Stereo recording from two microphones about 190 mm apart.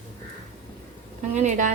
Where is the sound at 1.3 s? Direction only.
35° right (ahead or behind).